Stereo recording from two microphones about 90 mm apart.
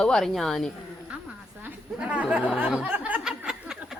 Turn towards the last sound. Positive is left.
turn(degrees=-5)  # may be behind; listen again after turning